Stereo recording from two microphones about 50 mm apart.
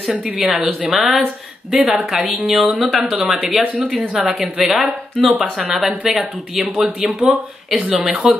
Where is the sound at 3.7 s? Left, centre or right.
Right.